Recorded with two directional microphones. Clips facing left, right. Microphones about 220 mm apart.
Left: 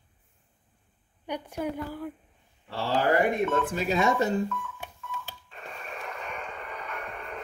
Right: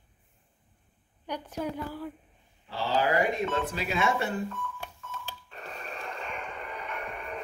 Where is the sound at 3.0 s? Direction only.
55° left (ahead or behind); by 4.3 s 40° left (ahead or behind).